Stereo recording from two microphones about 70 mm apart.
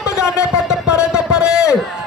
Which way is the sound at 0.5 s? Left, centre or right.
Centre.